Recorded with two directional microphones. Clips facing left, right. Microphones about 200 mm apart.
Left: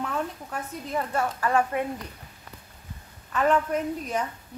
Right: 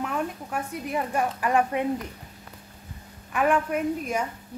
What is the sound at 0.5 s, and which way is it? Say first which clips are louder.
A woman's voice: right 2 dB; 15° right (ahead or behind).